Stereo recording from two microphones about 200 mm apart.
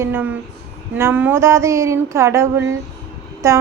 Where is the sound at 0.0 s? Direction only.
10° right (ahead or behind).